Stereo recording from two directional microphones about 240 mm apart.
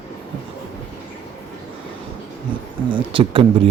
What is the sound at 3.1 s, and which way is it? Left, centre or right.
Speech, right.